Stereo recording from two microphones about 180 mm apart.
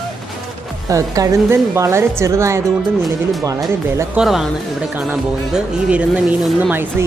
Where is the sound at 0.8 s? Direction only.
20° right (ahead or behind).